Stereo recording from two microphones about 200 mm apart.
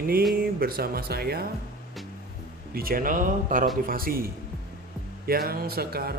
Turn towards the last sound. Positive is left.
turn(degrees=-50)  # may be behind; listen again after turning